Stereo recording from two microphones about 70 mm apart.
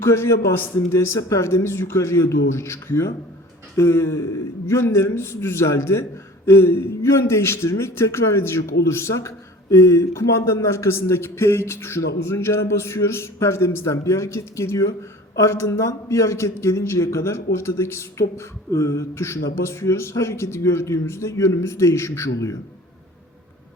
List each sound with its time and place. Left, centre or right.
0.0 s a man's voice: left